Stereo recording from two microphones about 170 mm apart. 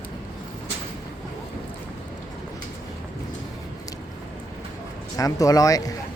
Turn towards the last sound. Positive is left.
turn(degrees=20)  # may be behind; listen again after turning